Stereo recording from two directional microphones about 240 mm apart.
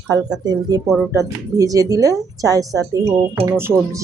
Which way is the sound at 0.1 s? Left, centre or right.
Centre.